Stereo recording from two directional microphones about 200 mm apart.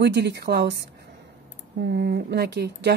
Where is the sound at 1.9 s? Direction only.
55° right (ahead or behind).